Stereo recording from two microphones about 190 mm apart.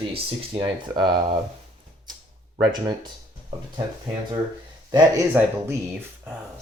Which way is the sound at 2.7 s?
20° right (ahead or behind).